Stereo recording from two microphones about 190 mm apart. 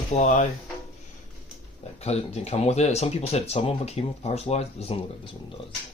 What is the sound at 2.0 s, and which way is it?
Speech, 35° left (ahead or behind).